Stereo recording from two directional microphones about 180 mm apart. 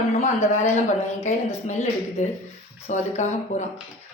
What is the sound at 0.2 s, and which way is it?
A woman's voice, 40° left (ahead or behind).